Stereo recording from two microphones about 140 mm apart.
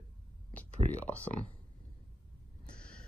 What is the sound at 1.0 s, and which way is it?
Speech, 10° left (ahead or behind).